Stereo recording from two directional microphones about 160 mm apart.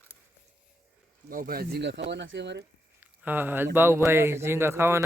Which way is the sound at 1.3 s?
65° right (ahead or behind).